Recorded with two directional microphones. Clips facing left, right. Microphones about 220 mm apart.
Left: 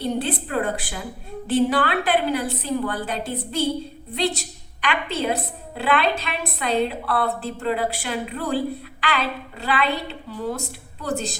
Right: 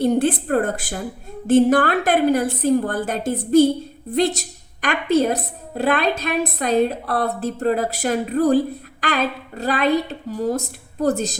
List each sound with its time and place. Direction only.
0.0 s a woman's voice: 50° right (ahead or behind)